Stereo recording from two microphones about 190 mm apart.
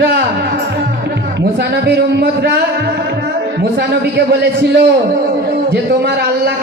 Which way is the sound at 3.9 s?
60° right (ahead or behind).